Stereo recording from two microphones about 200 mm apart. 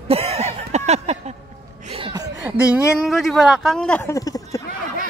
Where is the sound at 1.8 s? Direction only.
25° right (ahead or behind).